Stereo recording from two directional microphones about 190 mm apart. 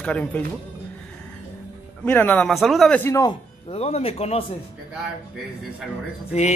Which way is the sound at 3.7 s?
35° left (ahead or behind).